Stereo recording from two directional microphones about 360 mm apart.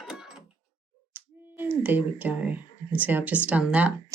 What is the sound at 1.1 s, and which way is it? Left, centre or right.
Speech, centre.